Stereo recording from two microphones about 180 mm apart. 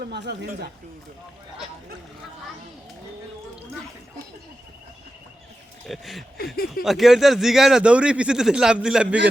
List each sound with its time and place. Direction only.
0.0 s speech: 70° right (ahead or behind)
5.9 s speech: centre (ahead or behind)